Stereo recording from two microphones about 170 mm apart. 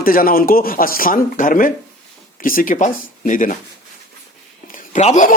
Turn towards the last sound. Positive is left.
turn(degrees=45)  # may be behind; listen again after turning